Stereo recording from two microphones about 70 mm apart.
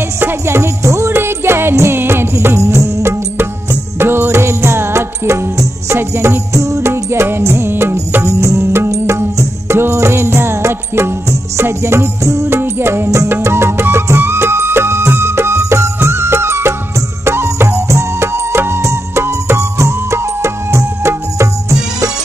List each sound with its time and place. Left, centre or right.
0.2 s music: right
6.9 s music: right
12.4 s music: right